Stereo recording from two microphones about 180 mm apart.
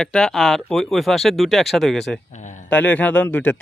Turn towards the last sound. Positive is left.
turn(degrees=10)  # may be behind; listen again after turning